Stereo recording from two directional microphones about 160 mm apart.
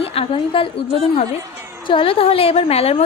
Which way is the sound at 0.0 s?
35° left (ahead or behind).